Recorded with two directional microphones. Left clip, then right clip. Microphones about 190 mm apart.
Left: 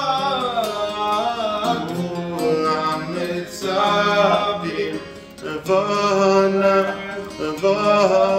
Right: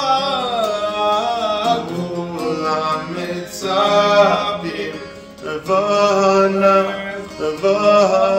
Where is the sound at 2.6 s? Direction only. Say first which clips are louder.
Right 1 dB; 15° left (ahead or behind).